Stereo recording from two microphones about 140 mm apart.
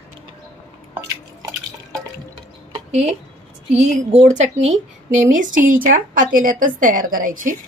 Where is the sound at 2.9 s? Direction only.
55° right (ahead or behind).